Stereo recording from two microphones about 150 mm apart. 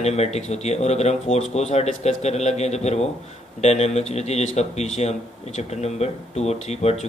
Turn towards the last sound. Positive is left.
turn(degrees=45)  # may be behind; listen again after turning